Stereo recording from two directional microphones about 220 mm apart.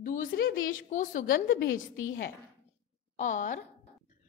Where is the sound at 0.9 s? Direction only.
35° left (ahead or behind).